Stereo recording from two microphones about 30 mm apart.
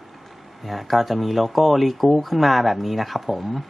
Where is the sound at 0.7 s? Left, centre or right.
Centre.